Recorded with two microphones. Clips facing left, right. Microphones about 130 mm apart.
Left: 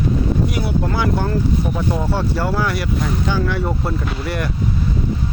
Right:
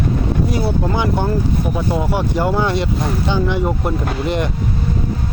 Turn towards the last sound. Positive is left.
turn(degrees=-20)  # may be behind; listen again after turning